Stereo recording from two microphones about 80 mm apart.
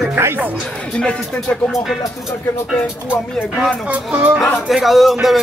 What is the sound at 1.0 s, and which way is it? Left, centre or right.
Music, centre.